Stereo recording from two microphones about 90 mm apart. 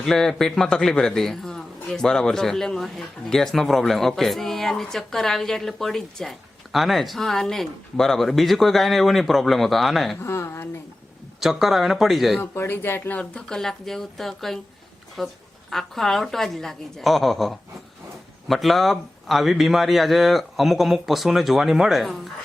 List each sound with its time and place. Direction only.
0.0 s speech: 5° left (ahead or behind)
10.2 s speech: 30° left (ahead or behind)
11.3 s speech: centre (ahead or behind)
12.4 s speech: 25° left (ahead or behind); by 22.3 s centre (ahead or behind)